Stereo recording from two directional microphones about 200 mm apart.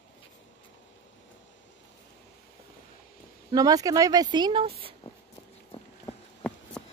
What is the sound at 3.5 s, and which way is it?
Speech, 20° right (ahead or behind).